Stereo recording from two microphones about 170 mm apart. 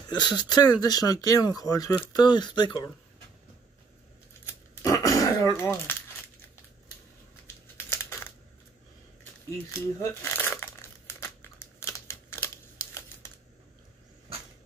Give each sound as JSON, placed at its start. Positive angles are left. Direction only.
{"t": 0.1, "sound": "speech", "side_deg": 25}
{"t": 4.5, "sound": "a sound", "side_deg": 20}
{"t": 7.4, "sound": "crumpling", "side_deg": 15}
{"t": 9.7, "sound": "crumpling", "side_deg": 15}